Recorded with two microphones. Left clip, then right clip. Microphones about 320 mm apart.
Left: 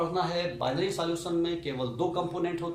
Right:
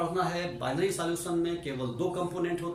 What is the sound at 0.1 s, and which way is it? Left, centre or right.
Speech, centre.